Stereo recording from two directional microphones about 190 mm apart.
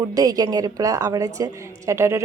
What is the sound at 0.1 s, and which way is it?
A woman's voice, 20° right (ahead or behind).